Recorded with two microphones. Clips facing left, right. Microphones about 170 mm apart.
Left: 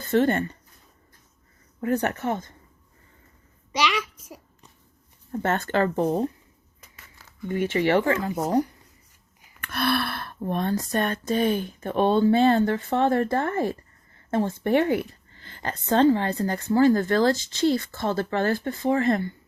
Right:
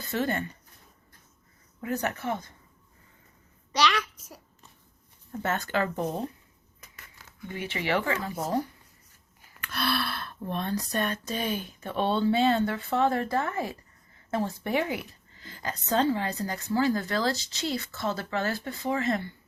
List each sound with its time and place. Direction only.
0.1 s speech: 50° left (ahead or behind)
1.8 s speech: 55° left (ahead or behind)
3.7 s a child's voice: 10° left (ahead or behind)
5.4 s speech: 50° left (ahead or behind)
7.4 s speech: 50° left (ahead or behind)
8.2 s speech: 20° left (ahead or behind)
9.6 s speech: 55° left (ahead or behind)